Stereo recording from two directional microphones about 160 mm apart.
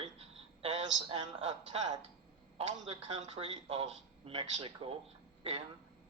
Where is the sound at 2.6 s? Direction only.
40° right (ahead or behind).